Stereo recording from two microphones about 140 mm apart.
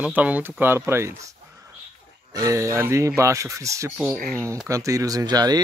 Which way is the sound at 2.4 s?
25° right (ahead or behind).